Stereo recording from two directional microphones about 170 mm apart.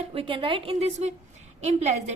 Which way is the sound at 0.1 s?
30° right (ahead or behind).